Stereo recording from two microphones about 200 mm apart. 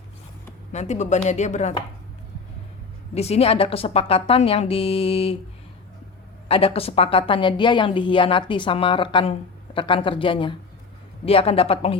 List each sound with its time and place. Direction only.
0.7 s speech: 35° left (ahead or behind)
3.2 s a woman's voice: 30° left (ahead or behind)
6.5 s a woman's voice: 30° left (ahead or behind)